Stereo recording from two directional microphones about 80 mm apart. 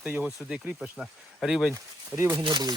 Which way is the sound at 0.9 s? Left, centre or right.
Centre.